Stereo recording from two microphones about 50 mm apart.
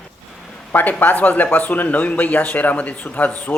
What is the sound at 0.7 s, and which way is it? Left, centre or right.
Speech, left.